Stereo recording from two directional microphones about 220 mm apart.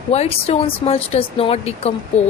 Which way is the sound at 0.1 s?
30° left (ahead or behind).